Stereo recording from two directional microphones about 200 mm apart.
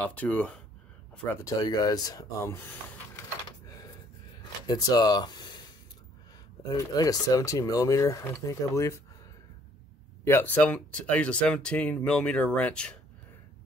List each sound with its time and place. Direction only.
0.0 s speech: 5° left (ahead or behind)
4.6 s speech: 20° left (ahead or behind)
6.7 s speech: 15° left (ahead or behind)
10.2 s speech: 10° left (ahead or behind)